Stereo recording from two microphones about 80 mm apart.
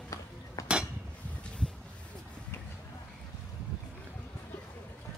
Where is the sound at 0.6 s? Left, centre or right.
Left.